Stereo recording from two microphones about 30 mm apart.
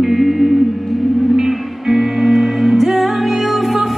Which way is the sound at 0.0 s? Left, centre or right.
Centre.